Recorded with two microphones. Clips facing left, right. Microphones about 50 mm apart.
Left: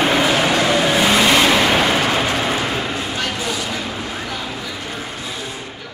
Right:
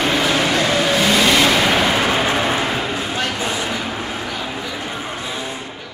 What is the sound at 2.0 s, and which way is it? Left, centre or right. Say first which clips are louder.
Vehicle: right 1 dB; centre.